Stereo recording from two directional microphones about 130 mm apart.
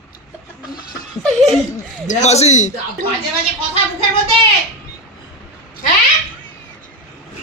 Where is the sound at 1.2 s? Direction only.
Centre (ahead or behind).